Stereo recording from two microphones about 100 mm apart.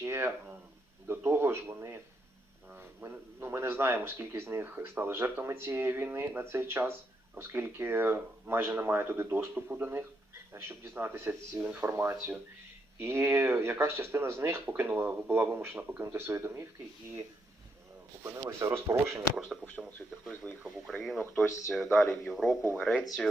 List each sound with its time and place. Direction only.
0.0 s a sound: 25° right (ahead or behind)
1.0 s speech: 20° right (ahead or behind)
18.2 s speech: 25° right (ahead or behind)
19.6 s speech: 15° right (ahead or behind)
20.7 s speech: 5° left (ahead or behind)